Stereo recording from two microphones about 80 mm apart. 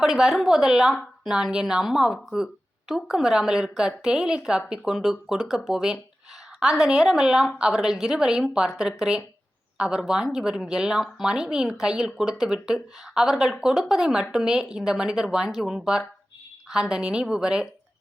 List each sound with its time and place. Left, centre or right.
0.0 s a woman's voice: centre